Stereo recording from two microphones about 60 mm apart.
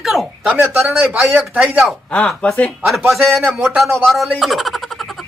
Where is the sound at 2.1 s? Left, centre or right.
Centre.